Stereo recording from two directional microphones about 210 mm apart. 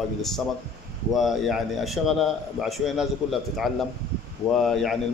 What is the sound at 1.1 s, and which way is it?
A man's voice, centre (ahead or behind).